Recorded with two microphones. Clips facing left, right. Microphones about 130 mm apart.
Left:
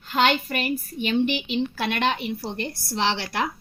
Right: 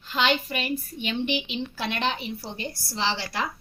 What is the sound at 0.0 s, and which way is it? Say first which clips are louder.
A woman's voice: left 3 dB; 50° left (ahead or behind).